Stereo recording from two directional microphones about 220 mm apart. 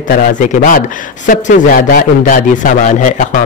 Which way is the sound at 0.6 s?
35° left (ahead or behind).